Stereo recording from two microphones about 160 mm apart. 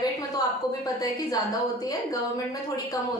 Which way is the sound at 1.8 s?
20° left (ahead or behind).